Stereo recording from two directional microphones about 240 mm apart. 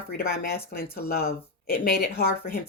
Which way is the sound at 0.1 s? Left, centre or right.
Left.